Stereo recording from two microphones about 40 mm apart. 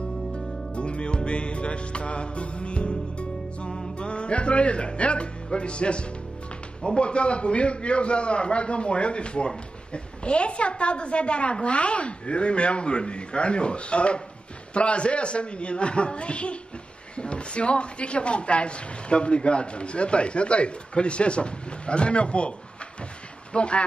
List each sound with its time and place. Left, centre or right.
0.7 s music: left
3.7 s music: centre
4.1 s speech: left
23.5 s speech: left